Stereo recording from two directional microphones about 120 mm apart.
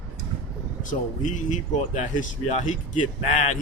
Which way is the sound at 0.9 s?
90° left.